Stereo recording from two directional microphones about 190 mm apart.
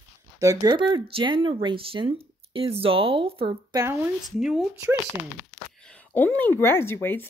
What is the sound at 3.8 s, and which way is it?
Speech, 15° right (ahead or behind).